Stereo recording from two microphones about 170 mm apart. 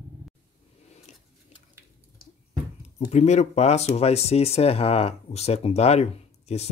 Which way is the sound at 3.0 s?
40° left (ahead or behind).